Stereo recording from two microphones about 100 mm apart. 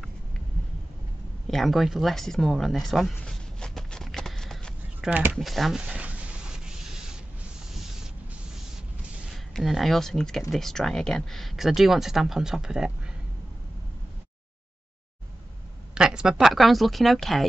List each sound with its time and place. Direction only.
1.5 s a sound: centre (ahead or behind)
5.1 s speech: 15° right (ahead or behind)
5.4 s speech: centre (ahead or behind)
5.8 s a sound: 10° right (ahead or behind)
9.3 s speech: centre (ahead or behind)
15.9 s speech: 5° right (ahead or behind)